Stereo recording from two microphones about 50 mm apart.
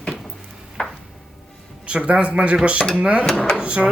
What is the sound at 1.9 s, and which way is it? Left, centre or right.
Speech, right.